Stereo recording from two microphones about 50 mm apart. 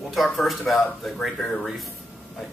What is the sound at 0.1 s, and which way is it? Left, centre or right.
A man's voice, centre.